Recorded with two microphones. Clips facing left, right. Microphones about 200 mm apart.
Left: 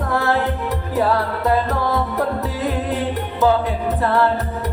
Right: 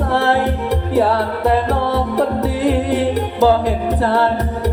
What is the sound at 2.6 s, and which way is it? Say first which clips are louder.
Music: right 6 dB; 80° right.